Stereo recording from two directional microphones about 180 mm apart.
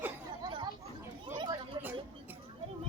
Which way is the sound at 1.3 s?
25° right (ahead or behind).